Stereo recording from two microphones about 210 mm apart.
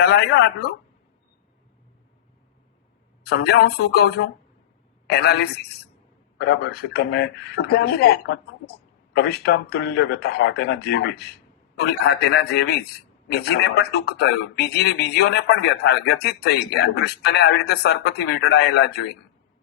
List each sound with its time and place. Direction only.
0.0 s speech: 50° left (ahead or behind)
3.2 s speech: 50° left (ahead or behind)